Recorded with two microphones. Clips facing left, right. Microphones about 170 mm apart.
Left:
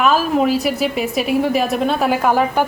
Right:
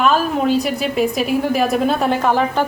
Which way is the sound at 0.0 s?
5° left (ahead or behind).